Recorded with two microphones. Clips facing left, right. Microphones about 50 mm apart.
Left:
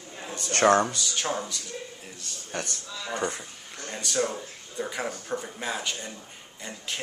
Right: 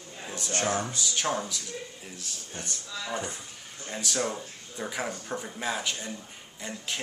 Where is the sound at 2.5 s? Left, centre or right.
Left.